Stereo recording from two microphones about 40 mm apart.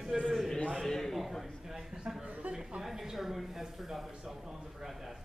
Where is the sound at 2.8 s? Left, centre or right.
Centre.